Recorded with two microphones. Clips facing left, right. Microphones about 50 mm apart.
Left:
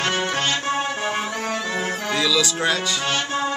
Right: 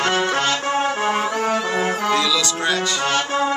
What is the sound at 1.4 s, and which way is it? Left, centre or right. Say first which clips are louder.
Music: right 5 dB; centre.